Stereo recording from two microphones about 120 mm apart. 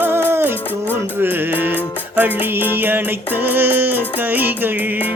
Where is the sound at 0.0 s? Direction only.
20° right (ahead or behind).